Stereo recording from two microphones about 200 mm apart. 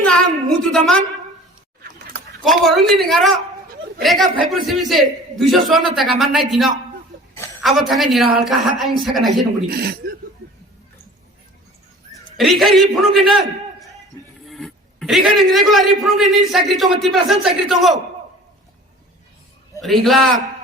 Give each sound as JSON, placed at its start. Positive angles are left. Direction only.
{"t": 0.0, "sound": "a sound", "side_deg": 5}
{"t": 2.4, "sound": "a man's voice", "side_deg": 0}
{"t": 9.6, "sound": "speech", "side_deg": -50}
{"t": 12.4, "sound": "a man's voice", "side_deg": 0}
{"t": 19.8, "sound": "a man's voice", "side_deg": 0}